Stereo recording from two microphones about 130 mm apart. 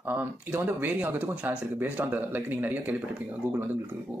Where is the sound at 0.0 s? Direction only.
15° right (ahead or behind).